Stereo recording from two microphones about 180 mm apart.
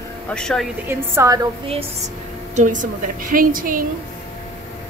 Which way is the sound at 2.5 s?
45° right (ahead or behind).